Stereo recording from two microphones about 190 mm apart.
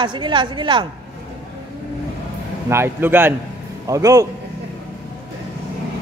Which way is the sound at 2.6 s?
15° right (ahead or behind).